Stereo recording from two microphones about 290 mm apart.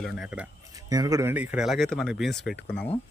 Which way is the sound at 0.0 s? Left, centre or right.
Centre.